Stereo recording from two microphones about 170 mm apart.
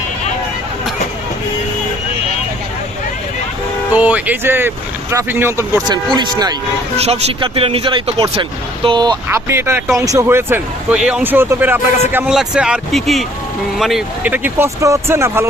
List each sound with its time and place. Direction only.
3.9 s speech: 10° right (ahead or behind); by 6.6 s 25° right (ahead or behind)
6.9 s speech: 40° right (ahead or behind)
9.5 s speech: 15° right (ahead or behind)